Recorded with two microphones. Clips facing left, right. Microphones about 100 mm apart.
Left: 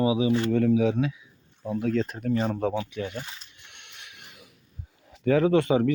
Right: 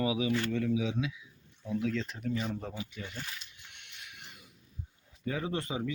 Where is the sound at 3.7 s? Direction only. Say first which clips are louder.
Left 3 dB; 60° left (ahead or behind); by 4.5 s 85° left.